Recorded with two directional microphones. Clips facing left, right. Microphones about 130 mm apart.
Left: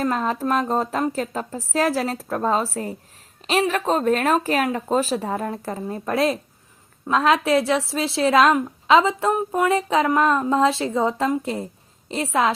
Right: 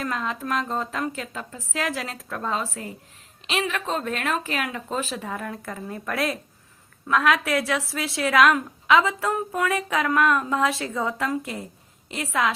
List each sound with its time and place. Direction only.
0.0 s a woman's voice: 40° left (ahead or behind)